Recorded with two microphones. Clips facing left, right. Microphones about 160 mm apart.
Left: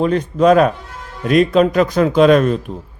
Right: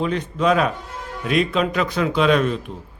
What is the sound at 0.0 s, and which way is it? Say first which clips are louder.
A man's voice: left 7 dB; 45° left (ahead or behind).